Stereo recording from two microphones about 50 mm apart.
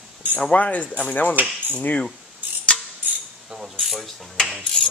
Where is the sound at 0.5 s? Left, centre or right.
Left.